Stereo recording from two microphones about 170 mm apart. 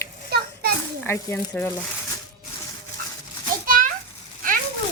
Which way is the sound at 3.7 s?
55° right (ahead or behind).